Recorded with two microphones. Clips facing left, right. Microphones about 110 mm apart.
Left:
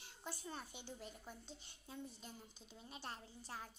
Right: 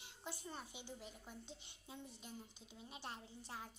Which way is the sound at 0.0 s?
15° right (ahead or behind).